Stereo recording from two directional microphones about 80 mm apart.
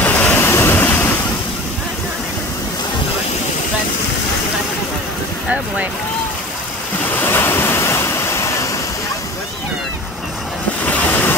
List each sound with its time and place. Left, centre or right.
0.0 s waves: left
7.2 s waves: left
10.9 s vehicle: left